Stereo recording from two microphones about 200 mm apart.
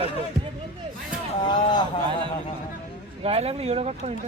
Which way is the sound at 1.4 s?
20° left (ahead or behind).